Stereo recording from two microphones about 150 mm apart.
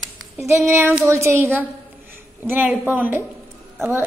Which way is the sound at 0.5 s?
20° right (ahead or behind).